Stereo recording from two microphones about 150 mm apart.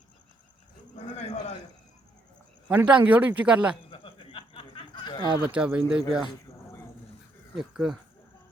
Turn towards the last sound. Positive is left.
turn(degrees=-5)  # may be behind; listen again after turning